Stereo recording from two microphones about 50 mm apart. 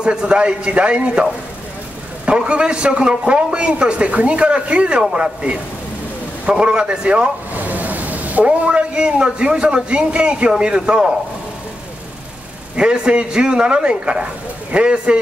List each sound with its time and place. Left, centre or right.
0.0 s a man's voice: centre
2.2 s a man's voice: right
7.5 s a man's voice: right; by 11.1 s centre
12.7 s a man's voice: centre